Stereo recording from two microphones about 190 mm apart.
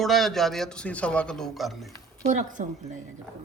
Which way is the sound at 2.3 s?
40° right (ahead or behind).